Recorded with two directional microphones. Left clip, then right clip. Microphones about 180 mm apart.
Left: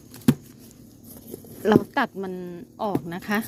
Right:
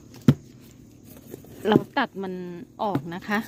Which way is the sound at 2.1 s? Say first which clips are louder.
Left 1 dB; 20° right (ahead or behind).